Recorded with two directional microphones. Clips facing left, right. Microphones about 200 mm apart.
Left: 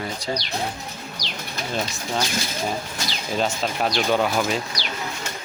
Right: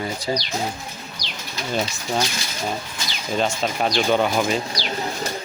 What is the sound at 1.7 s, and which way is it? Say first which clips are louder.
Speech: right 3 dB; centre (ahead or behind).